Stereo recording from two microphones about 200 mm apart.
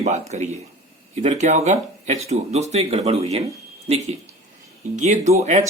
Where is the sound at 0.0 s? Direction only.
35° right (ahead or behind).